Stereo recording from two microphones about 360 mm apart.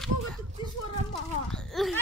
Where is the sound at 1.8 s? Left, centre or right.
Centre.